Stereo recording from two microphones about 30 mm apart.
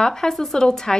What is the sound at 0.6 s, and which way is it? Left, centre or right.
Speech, left.